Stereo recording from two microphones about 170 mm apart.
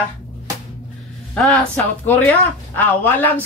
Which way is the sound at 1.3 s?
5° left (ahead or behind).